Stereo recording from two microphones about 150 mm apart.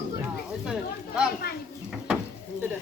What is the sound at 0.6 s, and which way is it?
Speech, 5° right (ahead or behind).